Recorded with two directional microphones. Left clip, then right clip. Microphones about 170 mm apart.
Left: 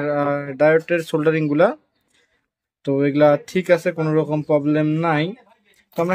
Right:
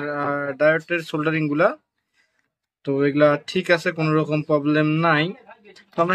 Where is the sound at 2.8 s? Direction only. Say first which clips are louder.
Left 2 dB; 45° left (ahead or behind).